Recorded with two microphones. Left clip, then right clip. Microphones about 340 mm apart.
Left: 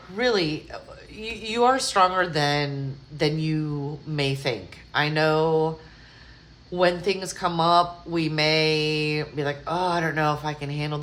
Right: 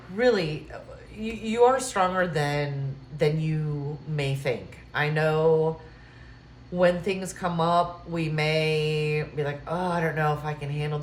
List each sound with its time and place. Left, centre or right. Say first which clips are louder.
0.2 s speech: even; centre
6.7 s speech: left 1 dB; centre